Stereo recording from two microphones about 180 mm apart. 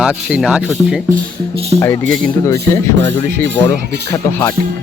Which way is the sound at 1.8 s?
15° left (ahead or behind).